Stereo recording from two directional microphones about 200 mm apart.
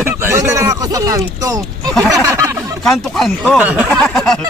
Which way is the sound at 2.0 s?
15° right (ahead or behind).